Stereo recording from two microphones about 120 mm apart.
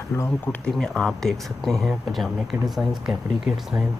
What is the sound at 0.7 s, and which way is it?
Speech, 5° left (ahead or behind).